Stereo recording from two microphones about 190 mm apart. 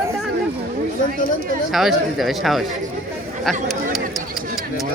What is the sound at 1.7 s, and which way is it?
Speech, centre (ahead or behind).